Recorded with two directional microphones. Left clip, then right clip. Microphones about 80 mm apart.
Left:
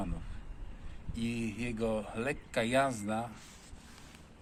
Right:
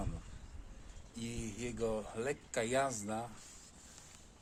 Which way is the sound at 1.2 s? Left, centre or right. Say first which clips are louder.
Left 7 dB; right.